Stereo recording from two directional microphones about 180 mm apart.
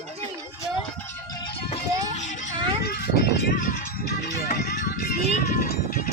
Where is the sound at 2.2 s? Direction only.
40° left (ahead or behind).